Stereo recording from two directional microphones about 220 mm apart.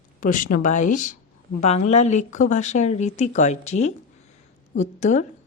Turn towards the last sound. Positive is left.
turn(degrees=30)  # may be behind; listen again after turning